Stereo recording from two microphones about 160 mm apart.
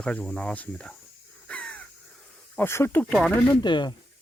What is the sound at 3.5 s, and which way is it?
Speech, 25° left (ahead or behind).